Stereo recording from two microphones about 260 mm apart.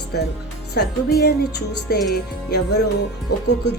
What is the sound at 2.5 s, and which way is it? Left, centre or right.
Speech, left.